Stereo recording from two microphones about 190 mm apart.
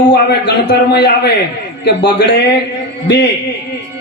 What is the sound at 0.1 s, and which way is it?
A man's voice, 60° left (ahead or behind).